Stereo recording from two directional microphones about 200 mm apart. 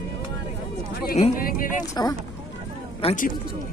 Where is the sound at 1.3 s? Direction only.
45° left (ahead or behind).